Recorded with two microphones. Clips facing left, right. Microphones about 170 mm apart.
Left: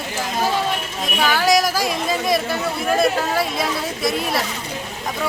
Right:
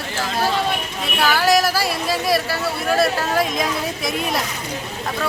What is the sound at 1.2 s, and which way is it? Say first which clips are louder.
Speech: even; 5° right (ahead or behind).